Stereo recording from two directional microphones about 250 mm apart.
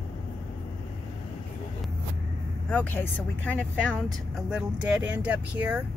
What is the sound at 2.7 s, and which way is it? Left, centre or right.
Speech, centre.